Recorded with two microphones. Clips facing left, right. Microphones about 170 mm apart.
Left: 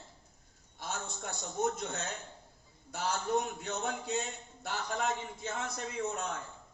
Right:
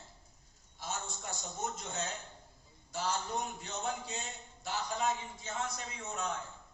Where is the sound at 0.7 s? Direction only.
60° left (ahead or behind).